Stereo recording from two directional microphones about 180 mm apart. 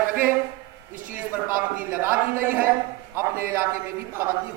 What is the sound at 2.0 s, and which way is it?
Speech, 10° right (ahead or behind).